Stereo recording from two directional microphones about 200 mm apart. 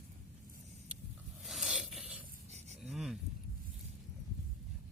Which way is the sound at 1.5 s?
5° right (ahead or behind).